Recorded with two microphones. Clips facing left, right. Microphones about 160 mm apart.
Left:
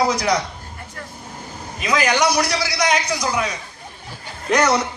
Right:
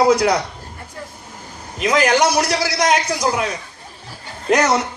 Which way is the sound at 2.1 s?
45° right (ahead or behind).